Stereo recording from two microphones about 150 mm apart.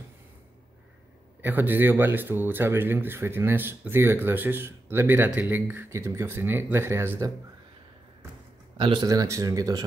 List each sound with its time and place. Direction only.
1.4 s speech: 10° right (ahead or behind)
8.7 s a man's voice: 35° right (ahead or behind)